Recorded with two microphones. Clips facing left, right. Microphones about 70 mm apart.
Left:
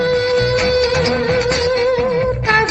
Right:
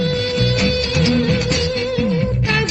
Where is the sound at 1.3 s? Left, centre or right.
Left.